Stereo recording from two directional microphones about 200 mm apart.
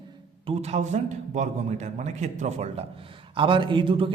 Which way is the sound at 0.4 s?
30° right (ahead or behind).